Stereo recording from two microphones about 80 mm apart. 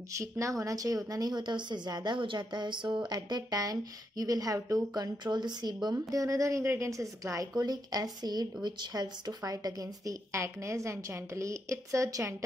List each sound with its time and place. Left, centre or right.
0.1 s a woman's voice: right
4.9 s a woman's voice: right
5.9 s a woman's voice: right
6.6 s a woman's voice: right
6.9 s a woman's voice: right